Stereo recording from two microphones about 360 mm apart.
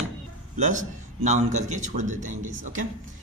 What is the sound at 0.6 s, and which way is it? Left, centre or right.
A man's voice, right.